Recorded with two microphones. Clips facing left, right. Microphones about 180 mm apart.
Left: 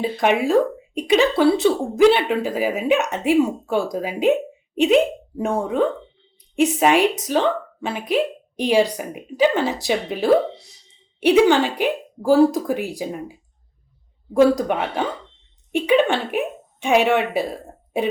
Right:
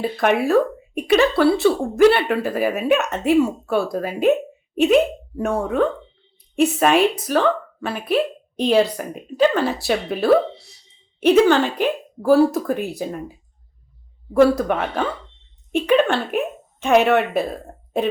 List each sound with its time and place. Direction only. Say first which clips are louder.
0.0 s speech: even; 15° left (ahead or behind)
14.4 s speech: even; 15° left (ahead or behind)